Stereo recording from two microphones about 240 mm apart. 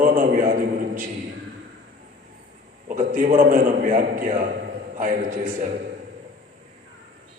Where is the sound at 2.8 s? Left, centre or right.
Right.